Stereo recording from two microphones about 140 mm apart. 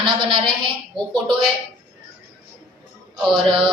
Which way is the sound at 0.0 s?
35° right (ahead or behind).